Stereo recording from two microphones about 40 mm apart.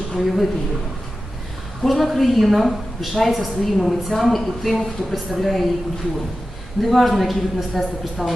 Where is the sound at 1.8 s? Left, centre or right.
Centre.